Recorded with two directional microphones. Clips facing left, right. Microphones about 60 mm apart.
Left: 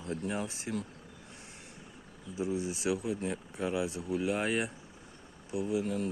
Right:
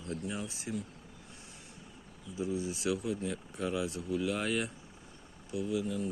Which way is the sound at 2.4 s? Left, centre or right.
Left.